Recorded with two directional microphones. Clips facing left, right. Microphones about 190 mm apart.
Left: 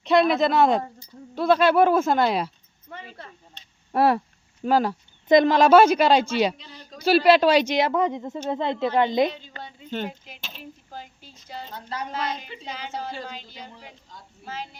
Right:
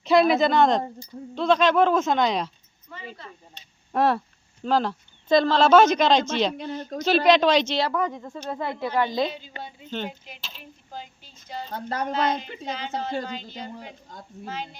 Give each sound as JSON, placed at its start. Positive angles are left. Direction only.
{"t": 0.0, "sound": "speech", "side_deg": 0}
{"t": 3.5, "sound": "a sound", "side_deg": 10}
{"t": 4.6, "sound": "speech", "side_deg": 10}
{"t": 6.6, "sound": "speech", "side_deg": -55}
{"t": 7.3, "sound": "a woman's voice", "side_deg": 10}
{"t": 9.5, "sound": "speech", "side_deg": -15}
{"t": 9.9, "sound": "speech", "side_deg": 5}
{"t": 11.7, "sound": "a woman's voice", "side_deg": -50}
{"t": 13.5, "sound": "a woman's voice", "side_deg": -50}
{"t": 14.4, "sound": "speech", "side_deg": 5}